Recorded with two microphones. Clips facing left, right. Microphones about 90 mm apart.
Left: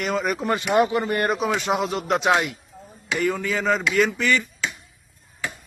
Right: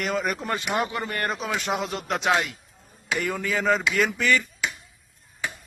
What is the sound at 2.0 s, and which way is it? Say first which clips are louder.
Speech: left 4 dB; 15° left (ahead or behind).